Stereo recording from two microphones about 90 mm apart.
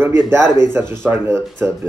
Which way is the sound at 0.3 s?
25° right (ahead or behind).